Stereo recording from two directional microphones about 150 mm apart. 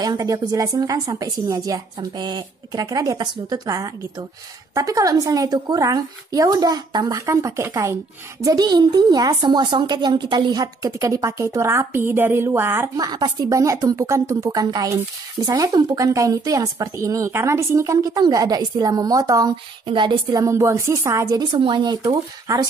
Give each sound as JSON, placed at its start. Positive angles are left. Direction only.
{"t": 0.0, "sound": "a woman's voice", "side_deg": -25}